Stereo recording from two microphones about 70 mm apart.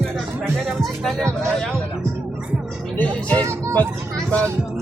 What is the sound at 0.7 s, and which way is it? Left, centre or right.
Speech, centre.